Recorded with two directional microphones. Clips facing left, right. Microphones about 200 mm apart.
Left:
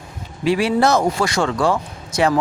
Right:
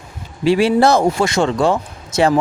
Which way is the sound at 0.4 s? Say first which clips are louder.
Right 4 dB; 30° right (ahead or behind).